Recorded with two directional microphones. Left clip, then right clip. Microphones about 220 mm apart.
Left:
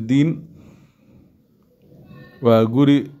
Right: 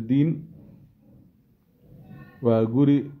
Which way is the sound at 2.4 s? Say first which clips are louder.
Left 6 dB; 20° left (ahead or behind).